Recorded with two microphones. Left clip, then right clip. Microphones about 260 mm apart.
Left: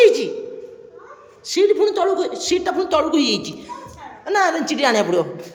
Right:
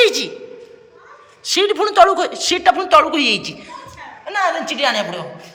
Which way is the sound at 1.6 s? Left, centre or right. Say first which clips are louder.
Left 1 dB; right.